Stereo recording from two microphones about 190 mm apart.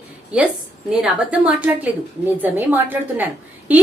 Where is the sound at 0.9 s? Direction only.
5° right (ahead or behind).